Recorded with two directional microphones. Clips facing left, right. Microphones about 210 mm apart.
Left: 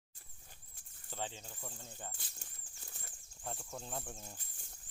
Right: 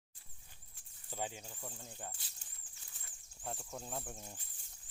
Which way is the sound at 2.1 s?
50° left (ahead or behind).